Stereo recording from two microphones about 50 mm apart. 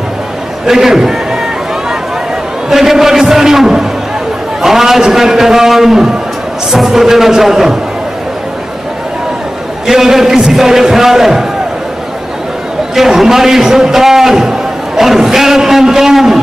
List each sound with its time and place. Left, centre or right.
0.7 s speech: centre
2.7 s a man's voice: centre
9.8 s a man's voice: centre
12.9 s a man's voice: centre